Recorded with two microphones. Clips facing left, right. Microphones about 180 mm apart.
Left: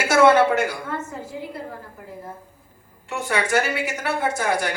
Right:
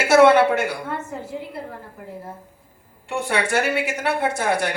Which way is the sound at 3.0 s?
60° right (ahead or behind).